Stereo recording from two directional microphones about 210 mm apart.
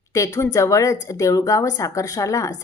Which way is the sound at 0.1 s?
15° left (ahead or behind).